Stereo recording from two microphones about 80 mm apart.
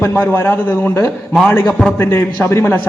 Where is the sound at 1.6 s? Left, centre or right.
Centre.